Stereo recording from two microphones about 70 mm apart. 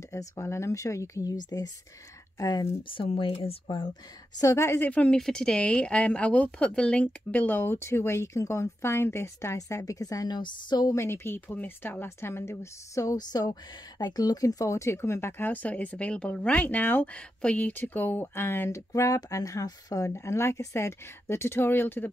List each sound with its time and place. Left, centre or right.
0.1 s speech: left
1.3 s a woman's voice: left
4.4 s speech: left
4.8 s speech: centre; by 9.6 s left
9.6 s a woman's voice: left
11.0 s speech: left
18.9 s a woman's voice: left
20.1 s speech: left